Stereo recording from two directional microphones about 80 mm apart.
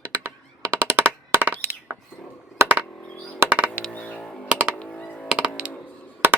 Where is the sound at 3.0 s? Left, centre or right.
Centre.